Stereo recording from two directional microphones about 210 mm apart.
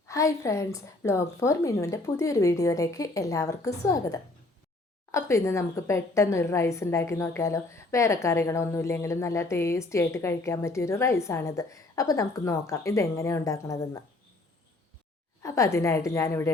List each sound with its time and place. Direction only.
0.1 s a woman's voice: 15° left (ahead or behind)
15.4 s a woman's voice: 15° left (ahead or behind)